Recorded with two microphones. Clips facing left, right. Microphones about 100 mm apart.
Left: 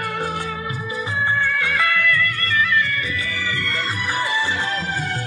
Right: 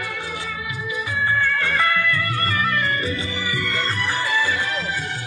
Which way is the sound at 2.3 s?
40° right (ahead or behind).